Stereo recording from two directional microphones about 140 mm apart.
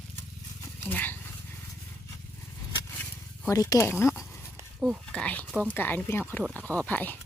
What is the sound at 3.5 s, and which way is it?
Speech, 25° left (ahead or behind).